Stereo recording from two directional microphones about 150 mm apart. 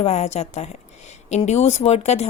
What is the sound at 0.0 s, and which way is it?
Speech, 45° left (ahead or behind).